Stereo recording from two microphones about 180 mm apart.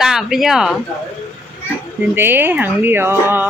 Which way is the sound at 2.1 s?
10° right (ahead or behind).